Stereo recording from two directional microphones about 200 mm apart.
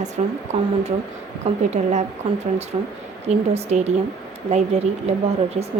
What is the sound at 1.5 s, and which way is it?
A woman's voice, 35° right (ahead or behind).